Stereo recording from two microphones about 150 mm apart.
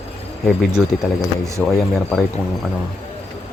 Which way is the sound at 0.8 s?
5° right (ahead or behind).